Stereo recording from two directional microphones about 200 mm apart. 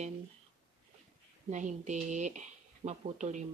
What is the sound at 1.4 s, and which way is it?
Speech, 35° right (ahead or behind).